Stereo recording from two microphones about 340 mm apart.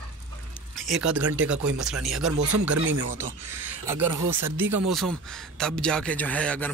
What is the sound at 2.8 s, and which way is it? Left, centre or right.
Speech, right.